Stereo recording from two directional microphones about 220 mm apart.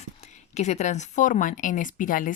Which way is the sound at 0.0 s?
30° left (ahead or behind).